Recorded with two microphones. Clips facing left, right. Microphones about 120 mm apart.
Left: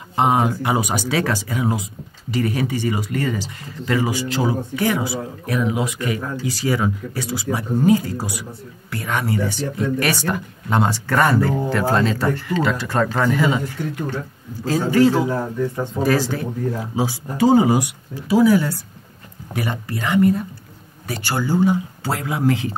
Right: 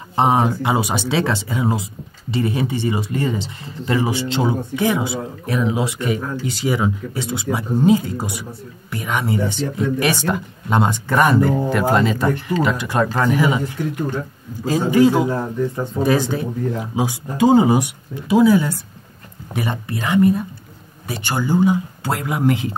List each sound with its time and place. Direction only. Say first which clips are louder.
0.1 s speech: right 1 dB; 30° right (ahead or behind)